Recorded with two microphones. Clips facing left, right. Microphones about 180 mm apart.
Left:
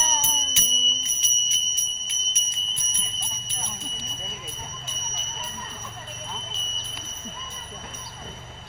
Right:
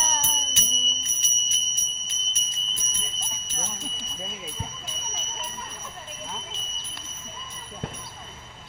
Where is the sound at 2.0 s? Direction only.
40° right (ahead or behind).